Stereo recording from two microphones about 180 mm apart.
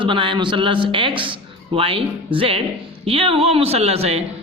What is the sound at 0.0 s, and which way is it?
A man's voice, 30° right (ahead or behind).